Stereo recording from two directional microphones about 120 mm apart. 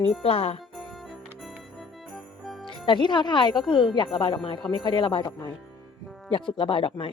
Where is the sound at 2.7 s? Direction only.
45° left (ahead or behind).